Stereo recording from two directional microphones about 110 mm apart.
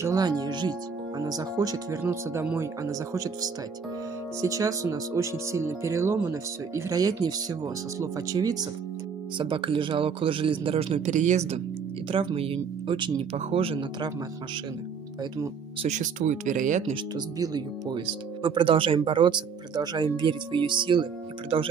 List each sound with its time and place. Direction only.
0.0 s speech: 35° right (ahead or behind)
4.4 s speech: 30° right (ahead or behind)
9.4 s a man's voice: 55° right (ahead or behind); by 11.6 s 80° right
12.1 s speech: 55° right (ahead or behind)
13.3 s a man's voice: 60° right (ahead or behind)
15.8 s speech: 90° right
17.4 s speech: 35° right (ahead or behind)